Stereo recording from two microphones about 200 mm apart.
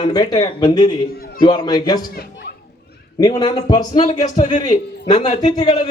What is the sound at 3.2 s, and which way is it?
Speech, 20° left (ahead or behind).